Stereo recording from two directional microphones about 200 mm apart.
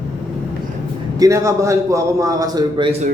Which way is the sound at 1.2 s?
15° right (ahead or behind).